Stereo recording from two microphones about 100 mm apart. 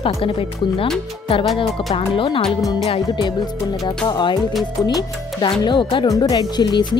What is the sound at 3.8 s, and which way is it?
Speech, 50° left (ahead or behind).